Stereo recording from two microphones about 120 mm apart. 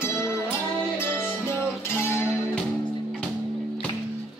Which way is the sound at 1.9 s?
20° left (ahead or behind).